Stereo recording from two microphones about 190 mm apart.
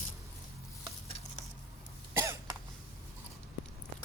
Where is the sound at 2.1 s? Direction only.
15° right (ahead or behind).